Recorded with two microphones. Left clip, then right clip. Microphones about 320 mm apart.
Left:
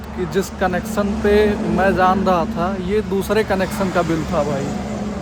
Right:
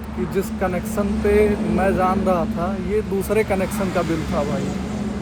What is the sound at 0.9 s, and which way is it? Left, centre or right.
Speech, left.